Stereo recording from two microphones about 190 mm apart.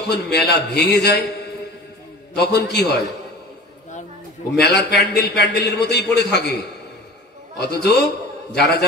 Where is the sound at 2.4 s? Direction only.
60° left (ahead or behind).